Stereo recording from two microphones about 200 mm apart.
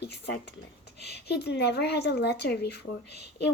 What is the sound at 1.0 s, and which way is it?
Speech, 55° left (ahead or behind).